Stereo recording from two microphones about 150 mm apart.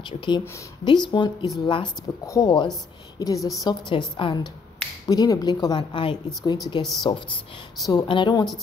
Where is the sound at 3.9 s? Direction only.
35° left (ahead or behind).